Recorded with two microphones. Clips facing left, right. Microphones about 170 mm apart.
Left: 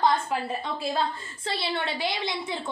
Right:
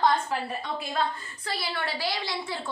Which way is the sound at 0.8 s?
25° left (ahead or behind).